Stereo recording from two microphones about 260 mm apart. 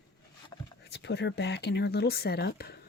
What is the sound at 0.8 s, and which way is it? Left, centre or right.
Speech, left.